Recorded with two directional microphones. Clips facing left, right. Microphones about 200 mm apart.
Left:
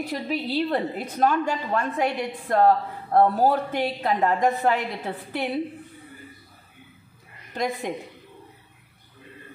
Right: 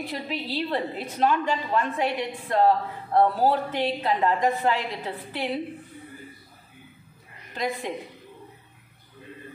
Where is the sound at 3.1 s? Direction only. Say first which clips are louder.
Left 2 dB; 45° left (ahead or behind).